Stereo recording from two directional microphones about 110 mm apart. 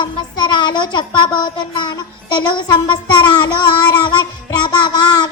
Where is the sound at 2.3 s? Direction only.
45° left (ahead or behind).